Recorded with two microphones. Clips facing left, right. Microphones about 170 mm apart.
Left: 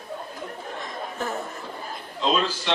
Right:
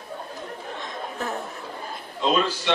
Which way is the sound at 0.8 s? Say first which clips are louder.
Left 1 dB; centre (ahead or behind).